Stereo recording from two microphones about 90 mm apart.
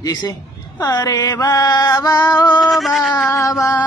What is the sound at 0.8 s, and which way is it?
Music, 40° left (ahead or behind).